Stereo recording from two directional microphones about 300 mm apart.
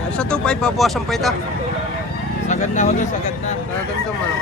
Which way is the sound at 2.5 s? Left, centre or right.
Left.